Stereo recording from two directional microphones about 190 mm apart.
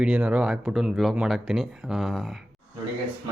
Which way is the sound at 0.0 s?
5° right (ahead or behind).